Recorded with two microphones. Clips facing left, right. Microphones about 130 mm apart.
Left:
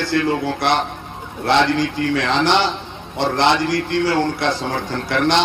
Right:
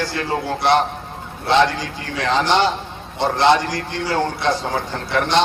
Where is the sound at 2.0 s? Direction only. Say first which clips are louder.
Left 11 dB; 55° left (ahead or behind).